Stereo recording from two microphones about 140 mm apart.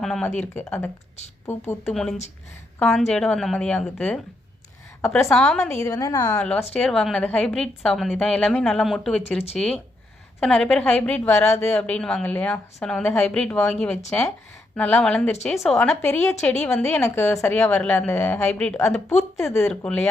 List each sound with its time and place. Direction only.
0.0 s a sound: 5° left (ahead or behind)
0.3 s a woman's voice: 15° left (ahead or behind)
1.9 s a woman's voice: 5° left (ahead or behind)
5.8 s a woman's voice: 25° left (ahead or behind)
6.3 s a woman's voice: 10° left (ahead or behind)
11.3 s a woman's voice: 20° left (ahead or behind)
11.7 s a woman's voice: 10° left (ahead or behind)
16.0 s a woman's voice: 15° left (ahead or behind)